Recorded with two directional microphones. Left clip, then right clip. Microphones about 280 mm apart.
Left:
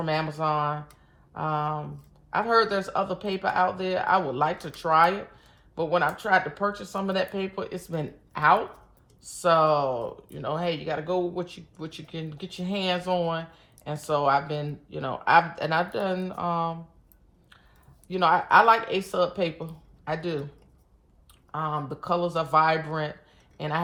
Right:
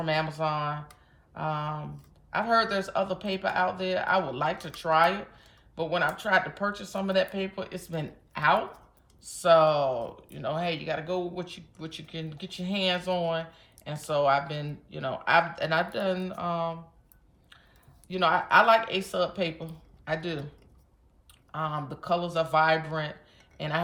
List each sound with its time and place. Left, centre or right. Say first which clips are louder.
0.0 s speech: left 1 dB; centre
18.1 s speech: left 3 dB; centre
21.5 s speech: left 3 dB; centre